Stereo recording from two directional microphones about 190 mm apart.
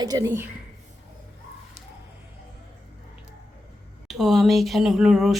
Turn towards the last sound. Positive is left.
turn(degrees=0)  # may be behind; listen again after turning